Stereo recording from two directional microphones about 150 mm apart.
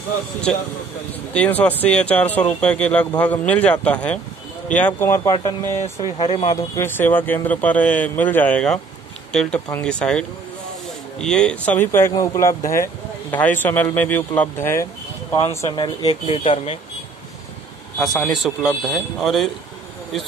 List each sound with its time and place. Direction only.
1.3 s speech: 10° left (ahead or behind)
6.1 s speech: 30° left (ahead or behind); by 14.9 s 15° left (ahead or behind)
15.7 s speech: 30° left (ahead or behind)
17.9 s a man's voice: centre (ahead or behind)